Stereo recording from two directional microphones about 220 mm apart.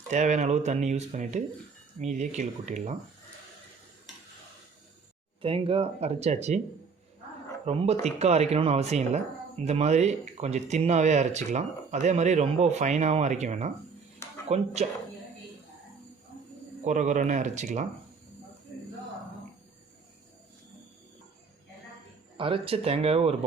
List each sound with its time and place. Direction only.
0.1 s speech: 35° right (ahead or behind)
5.4 s speech: 25° right (ahead or behind)
7.6 s speech: 30° right (ahead or behind)
16.8 s speech: 35° right (ahead or behind)
22.4 s speech: 25° right (ahead or behind)